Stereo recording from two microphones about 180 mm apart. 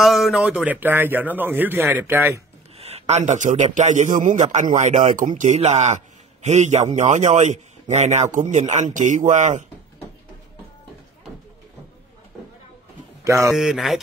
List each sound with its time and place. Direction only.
0.0 s a man's voice: centre (ahead or behind)
2.8 s a man's voice: 35° right (ahead or behind)
13.2 s a man's voice: 15° right (ahead or behind)
13.5 s speech: centre (ahead or behind)